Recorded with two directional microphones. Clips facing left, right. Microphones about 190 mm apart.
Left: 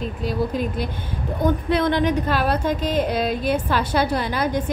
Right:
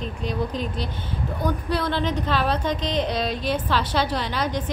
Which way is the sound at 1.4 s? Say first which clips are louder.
Left 6 dB; 20° left (ahead or behind).